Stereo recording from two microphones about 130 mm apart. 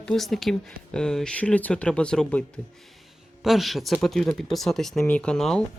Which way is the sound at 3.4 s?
Centre (ahead or behind).